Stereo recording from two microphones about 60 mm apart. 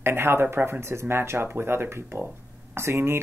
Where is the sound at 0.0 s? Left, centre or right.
Right.